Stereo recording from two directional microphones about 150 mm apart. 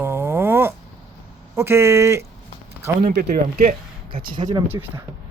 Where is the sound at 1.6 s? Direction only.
15° right (ahead or behind).